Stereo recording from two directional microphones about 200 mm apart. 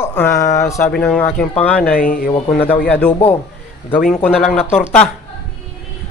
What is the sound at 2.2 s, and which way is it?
Speech, 10° left (ahead or behind).